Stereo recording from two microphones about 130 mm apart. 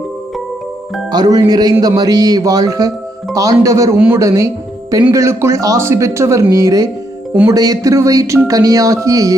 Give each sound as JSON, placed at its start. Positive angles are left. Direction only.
{"t": 1.1, "sound": "music", "side_deg": -30}
{"t": 2.0, "sound": "speech", "side_deg": -30}
{"t": 3.9, "sound": "a man's voice", "side_deg": -10}
{"t": 4.2, "sound": "speech", "side_deg": -25}